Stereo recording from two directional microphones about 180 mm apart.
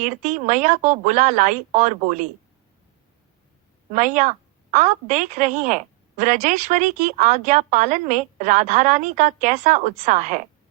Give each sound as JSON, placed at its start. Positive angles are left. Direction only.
{"t": 0.0, "sound": "a woman's voice", "side_deg": -40}
{"t": 3.9, "sound": "a woman's voice", "side_deg": -45}